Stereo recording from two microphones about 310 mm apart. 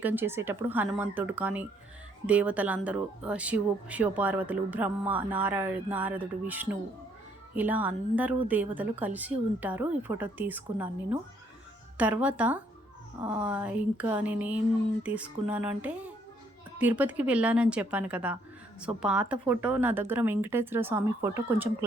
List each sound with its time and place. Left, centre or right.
0.0 s a woman's voice: centre